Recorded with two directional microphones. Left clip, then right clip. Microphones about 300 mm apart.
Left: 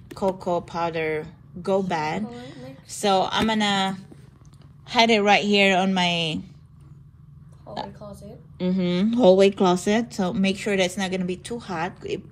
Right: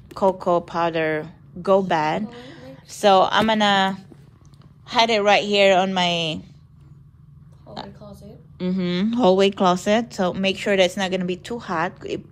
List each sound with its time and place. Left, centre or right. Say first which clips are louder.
0.1 s a woman's voice: right 5 dB; centre
7.9 s a sound: left 2 dB; centre
8.5 s speech: even; centre